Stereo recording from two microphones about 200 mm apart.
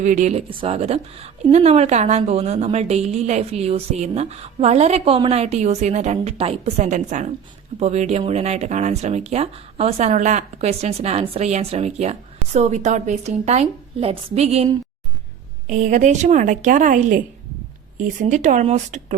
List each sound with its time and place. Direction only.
0.0 s a woman's voice: 40° right (ahead or behind)
15.7 s a woman's voice: 40° right (ahead or behind)